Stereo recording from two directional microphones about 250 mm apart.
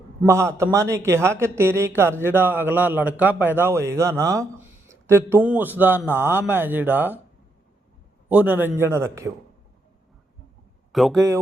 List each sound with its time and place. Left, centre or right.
0.2 s a man's voice: centre
8.3 s a man's voice: centre
10.9 s speech: centre